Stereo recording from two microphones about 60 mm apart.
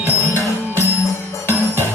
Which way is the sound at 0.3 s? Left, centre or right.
Left.